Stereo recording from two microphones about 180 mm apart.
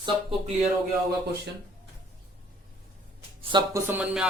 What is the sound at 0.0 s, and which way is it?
Speech, 30° right (ahead or behind).